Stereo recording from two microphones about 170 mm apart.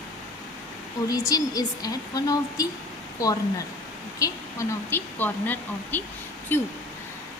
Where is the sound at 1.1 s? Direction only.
20° left (ahead or behind).